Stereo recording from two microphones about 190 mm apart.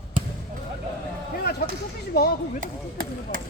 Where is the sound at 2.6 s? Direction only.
50° right (ahead or behind).